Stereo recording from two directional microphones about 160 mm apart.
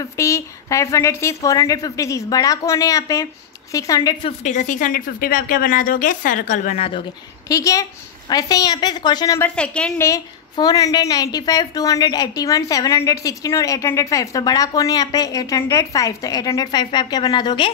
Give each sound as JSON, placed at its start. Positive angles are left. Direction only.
{"t": 0.0, "sound": "a woman's voice", "side_deg": 20}
{"t": 4.4, "sound": "a woman's voice", "side_deg": 50}
{"t": 6.8, "sound": "speech", "side_deg": 35}
{"t": 7.4, "sound": "a woman's voice", "side_deg": 20}
{"t": 9.4, "sound": "a woman's voice", "side_deg": 5}
{"t": 10.0, "sound": "a woman's voice", "side_deg": 20}